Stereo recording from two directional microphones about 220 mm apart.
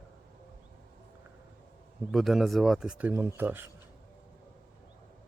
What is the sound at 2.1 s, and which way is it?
Speech, centre (ahead or behind).